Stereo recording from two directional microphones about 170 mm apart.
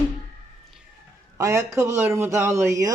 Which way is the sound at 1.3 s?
15° right (ahead or behind).